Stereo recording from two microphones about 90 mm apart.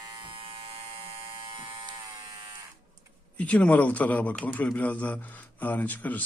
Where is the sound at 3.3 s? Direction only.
15° left (ahead or behind).